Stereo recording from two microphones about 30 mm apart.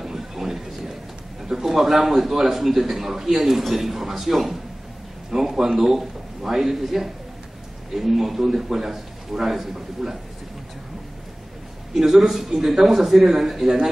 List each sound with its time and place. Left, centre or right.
0.0 s a sound: centre
1.5 s a man's voice: centre
12.1 s a man's voice: centre